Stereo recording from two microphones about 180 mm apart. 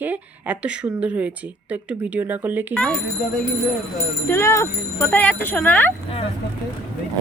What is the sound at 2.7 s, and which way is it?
Speech, 5° left (ahead or behind).